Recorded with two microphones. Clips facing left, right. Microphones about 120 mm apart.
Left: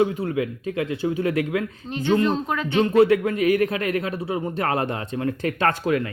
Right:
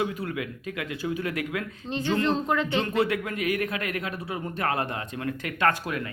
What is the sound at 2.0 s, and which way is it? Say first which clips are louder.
Speech: left 4 dB; 15° left (ahead or behind).